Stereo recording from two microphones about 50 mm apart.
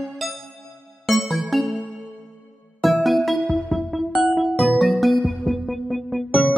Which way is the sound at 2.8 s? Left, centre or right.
Centre.